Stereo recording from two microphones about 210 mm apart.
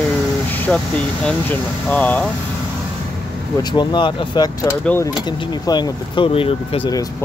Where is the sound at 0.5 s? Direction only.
5° left (ahead or behind).